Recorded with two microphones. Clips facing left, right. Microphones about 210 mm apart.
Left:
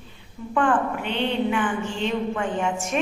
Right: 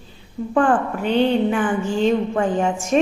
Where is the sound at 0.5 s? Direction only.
40° right (ahead or behind).